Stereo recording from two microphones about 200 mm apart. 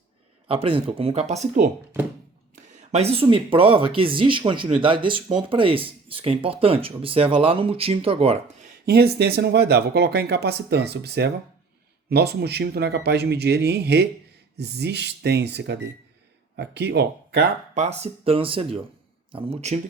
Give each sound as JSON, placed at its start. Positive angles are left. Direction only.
{"t": 0.4, "sound": "speech", "side_deg": -30}
{"t": 2.6, "sound": "speech", "side_deg": -30}
{"t": 8.9, "sound": "speech", "side_deg": -55}
{"t": 17.7, "sound": "speech", "side_deg": -30}